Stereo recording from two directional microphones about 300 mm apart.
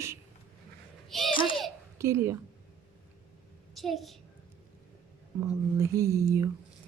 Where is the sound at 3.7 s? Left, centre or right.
Centre.